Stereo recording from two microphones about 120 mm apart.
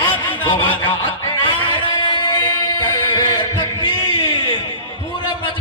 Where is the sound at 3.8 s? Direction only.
40° left (ahead or behind).